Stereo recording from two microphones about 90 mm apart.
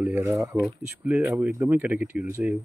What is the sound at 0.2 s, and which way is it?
Speech, 35° right (ahead or behind).